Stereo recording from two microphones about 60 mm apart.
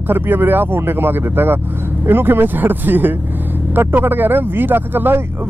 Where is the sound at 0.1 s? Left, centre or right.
Right.